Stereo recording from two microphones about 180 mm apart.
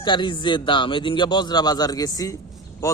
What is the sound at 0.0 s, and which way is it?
A man's voice, 25° left (ahead or behind).